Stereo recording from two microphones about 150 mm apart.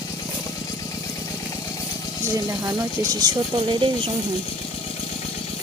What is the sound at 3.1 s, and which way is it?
Speech, 25° right (ahead or behind).